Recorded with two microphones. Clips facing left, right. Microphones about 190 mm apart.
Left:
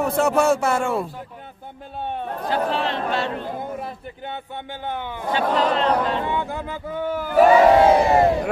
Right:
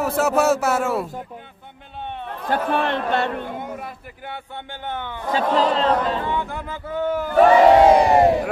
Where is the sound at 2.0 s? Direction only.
45° left (ahead or behind).